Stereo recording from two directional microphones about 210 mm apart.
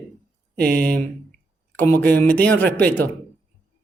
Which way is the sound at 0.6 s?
50° right (ahead or behind).